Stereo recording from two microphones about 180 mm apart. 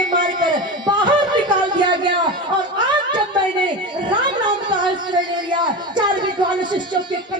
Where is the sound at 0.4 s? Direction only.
25° right (ahead or behind).